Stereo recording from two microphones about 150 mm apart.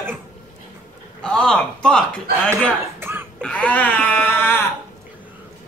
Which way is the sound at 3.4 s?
10° left (ahead or behind).